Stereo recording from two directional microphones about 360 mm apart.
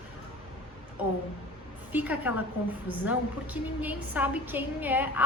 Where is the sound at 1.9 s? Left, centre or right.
Centre.